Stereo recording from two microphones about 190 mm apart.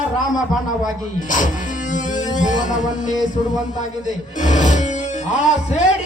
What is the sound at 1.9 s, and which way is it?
Music, 40° left (ahead or behind).